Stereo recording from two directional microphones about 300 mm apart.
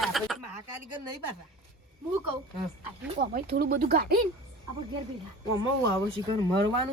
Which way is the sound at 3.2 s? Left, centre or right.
Right.